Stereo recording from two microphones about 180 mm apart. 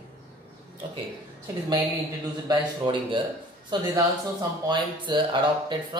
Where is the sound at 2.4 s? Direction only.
25° right (ahead or behind).